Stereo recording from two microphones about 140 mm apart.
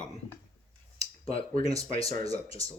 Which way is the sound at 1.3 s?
80° right.